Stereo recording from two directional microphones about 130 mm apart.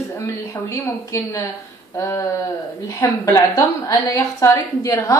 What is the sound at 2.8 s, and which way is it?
A woman's voice, 25° left (ahead or behind).